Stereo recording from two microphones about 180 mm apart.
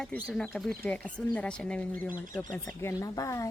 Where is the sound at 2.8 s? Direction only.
20° left (ahead or behind).